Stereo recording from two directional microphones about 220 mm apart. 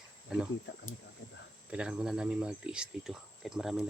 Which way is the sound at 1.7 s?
5° right (ahead or behind).